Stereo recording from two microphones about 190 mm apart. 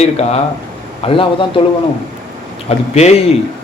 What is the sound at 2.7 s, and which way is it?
Speech, 35° left (ahead or behind).